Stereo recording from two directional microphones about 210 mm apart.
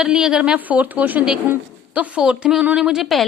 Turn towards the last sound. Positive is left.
turn(degrees=0)  # may be behind; listen again after turning